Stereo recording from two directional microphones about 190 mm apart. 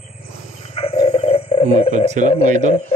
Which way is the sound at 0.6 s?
30° left (ahead or behind).